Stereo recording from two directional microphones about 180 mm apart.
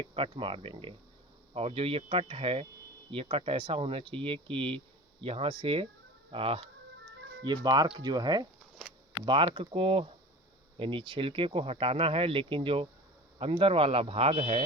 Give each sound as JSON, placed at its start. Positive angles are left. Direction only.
{"t": 0.0, "sound": "speech", "side_deg": -30}